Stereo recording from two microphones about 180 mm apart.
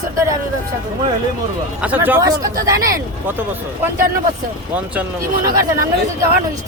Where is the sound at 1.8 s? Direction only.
10° right (ahead or behind).